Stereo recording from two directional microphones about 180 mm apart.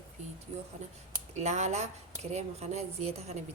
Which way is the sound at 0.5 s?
40° right (ahead or behind).